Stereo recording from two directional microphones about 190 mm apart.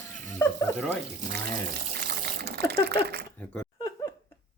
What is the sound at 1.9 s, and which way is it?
Water, 55° right (ahead or behind).